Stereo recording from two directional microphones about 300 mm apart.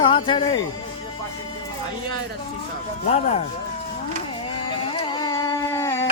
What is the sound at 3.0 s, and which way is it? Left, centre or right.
Speech, left.